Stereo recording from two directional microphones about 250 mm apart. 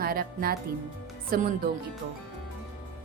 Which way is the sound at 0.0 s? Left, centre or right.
Right.